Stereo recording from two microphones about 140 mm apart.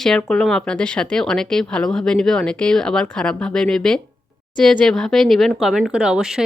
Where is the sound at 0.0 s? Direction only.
5° left (ahead or behind).